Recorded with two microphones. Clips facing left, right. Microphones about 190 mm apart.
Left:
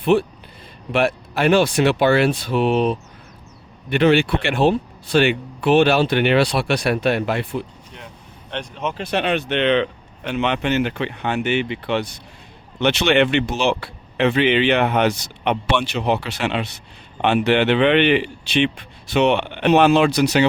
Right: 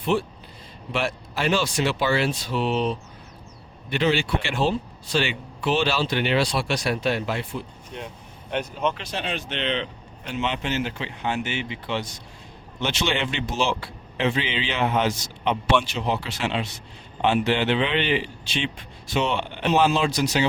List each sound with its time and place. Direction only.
0.0 s a man's voice: 65° left (ahead or behind)
8.4 s speech: 10° right (ahead or behind)
9.0 s a man's voice: 65° left (ahead or behind)